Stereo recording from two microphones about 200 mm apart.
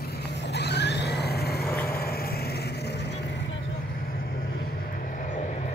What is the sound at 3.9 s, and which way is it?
Vehicle, 45° left (ahead or behind).